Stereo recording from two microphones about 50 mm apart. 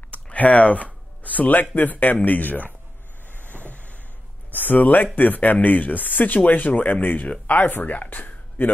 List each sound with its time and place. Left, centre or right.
0.1 s music: left
1.8 s speech: left
3.3 s vehicle: left
4.5 s speech: left